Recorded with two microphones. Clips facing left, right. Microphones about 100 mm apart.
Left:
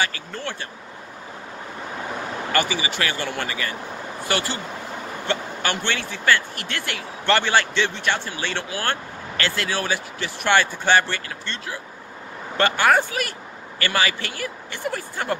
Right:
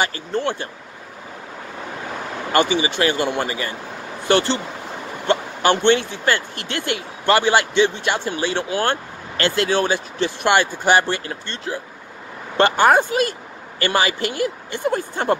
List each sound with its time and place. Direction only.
0.0 s speech: 25° right (ahead or behind)
2.5 s speech: 25° right (ahead or behind)